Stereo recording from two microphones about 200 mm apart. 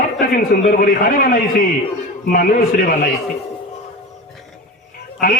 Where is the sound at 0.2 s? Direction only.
45° left (ahead or behind).